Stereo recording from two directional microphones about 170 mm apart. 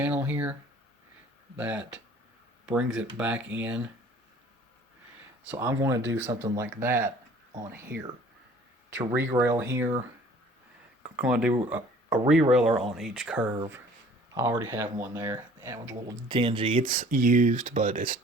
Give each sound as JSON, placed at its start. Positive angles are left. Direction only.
{"t": 0.0, "sound": "speech", "side_deg": -10}
{"t": 1.5, "sound": "speech", "side_deg": -5}
{"t": 5.5, "sound": "speech", "side_deg": -15}
{"t": 6.0, "sound": "speech", "side_deg": -90}
{"t": 6.6, "sound": "speech", "side_deg": -15}
{"t": 11.2, "sound": "speech", "side_deg": -5}
{"t": 16.3, "sound": "speech", "side_deg": -30}
{"t": 16.9, "sound": "speech", "side_deg": -55}